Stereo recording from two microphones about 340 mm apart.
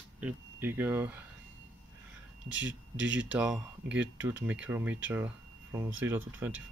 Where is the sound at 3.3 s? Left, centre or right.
Centre.